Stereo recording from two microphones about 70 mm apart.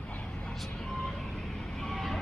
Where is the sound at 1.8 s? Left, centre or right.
Centre.